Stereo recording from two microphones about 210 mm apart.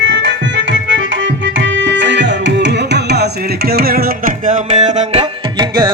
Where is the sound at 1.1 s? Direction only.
60° right (ahead or behind).